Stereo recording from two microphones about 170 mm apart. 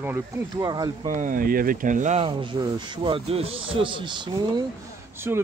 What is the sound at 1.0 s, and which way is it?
Speech, 50° right (ahead or behind).